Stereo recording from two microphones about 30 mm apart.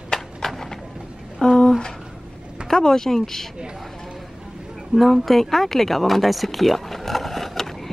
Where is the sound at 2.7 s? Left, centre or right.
Centre.